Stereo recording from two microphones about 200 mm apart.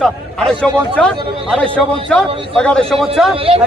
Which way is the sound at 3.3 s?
30° right (ahead or behind).